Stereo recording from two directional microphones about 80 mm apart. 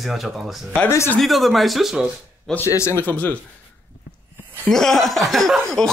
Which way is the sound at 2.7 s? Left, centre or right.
Left.